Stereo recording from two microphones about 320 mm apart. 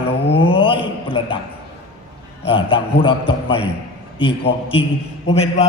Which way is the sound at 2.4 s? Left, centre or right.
Centre.